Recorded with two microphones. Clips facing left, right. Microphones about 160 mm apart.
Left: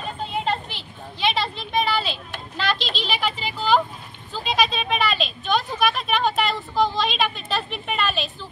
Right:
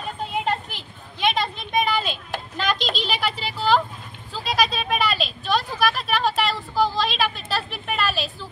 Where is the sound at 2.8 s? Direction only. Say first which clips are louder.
Right 2 dB; 45° right (ahead or behind).